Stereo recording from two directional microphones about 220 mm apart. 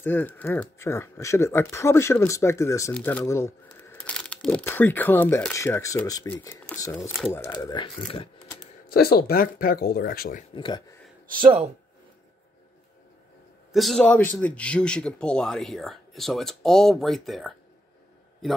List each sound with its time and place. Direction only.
0.0 s speech: 10° left (ahead or behind)
8.8 s speech: 45° left (ahead or behind)
10.5 s speech: 20° left (ahead or behind)
11.4 s speech: 20° right (ahead or behind)
13.7 s a man's voice: centre (ahead or behind)